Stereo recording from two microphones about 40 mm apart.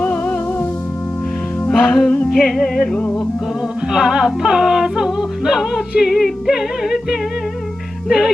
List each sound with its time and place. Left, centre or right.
0.0 s music: left
1.7 s music: centre
2.0 s music: left
3.9 s music: centre
6.1 s music: centre